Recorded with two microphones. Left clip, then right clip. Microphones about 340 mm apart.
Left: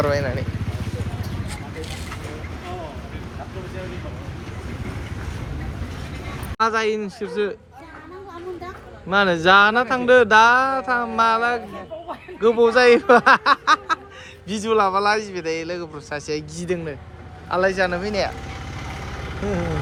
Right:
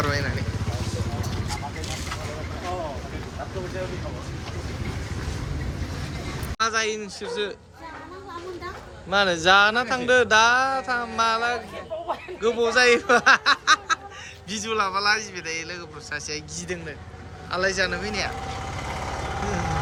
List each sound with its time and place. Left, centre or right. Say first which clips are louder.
0.0 s speech: left 5 dB; centre
6.6 s speech: left 4 dB; centre
9.0 s a man's voice: left 3 dB; centre